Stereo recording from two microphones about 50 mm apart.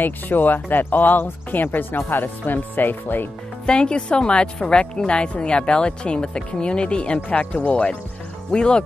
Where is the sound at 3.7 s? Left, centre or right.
Centre.